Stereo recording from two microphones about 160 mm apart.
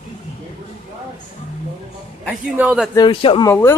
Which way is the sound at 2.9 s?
30° left (ahead or behind).